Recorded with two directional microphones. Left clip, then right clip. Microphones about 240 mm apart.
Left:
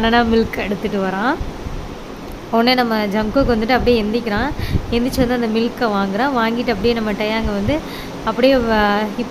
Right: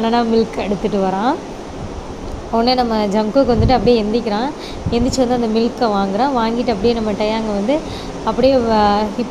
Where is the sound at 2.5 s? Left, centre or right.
Centre.